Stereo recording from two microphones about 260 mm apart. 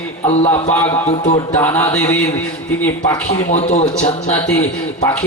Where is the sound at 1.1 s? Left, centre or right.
Left.